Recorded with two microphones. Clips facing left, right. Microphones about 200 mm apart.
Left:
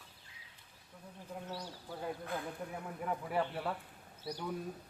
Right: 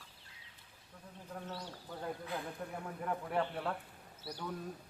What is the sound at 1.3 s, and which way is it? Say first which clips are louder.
A man's voice: left 1 dB; 10° left (ahead or behind).